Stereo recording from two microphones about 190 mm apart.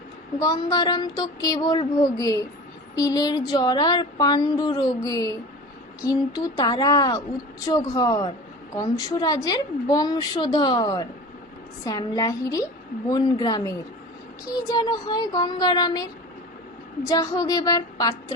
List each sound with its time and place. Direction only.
0.3 s a woman's voice: 20° left (ahead or behind)
17.1 s a woman's voice: 20° left (ahead or behind)